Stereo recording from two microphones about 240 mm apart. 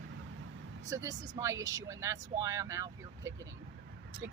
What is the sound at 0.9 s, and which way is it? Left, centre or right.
Speech, centre.